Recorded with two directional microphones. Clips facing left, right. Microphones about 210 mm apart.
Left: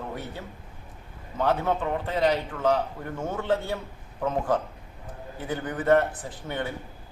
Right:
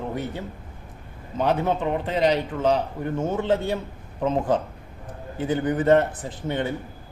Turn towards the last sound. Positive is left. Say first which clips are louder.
# right 5 dB
turn(degrees=-20)  # may be behind; listen again after turning